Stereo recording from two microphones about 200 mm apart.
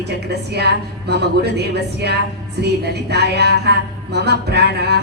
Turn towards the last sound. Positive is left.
turn(degrees=-55)  # may be behind; listen again after turning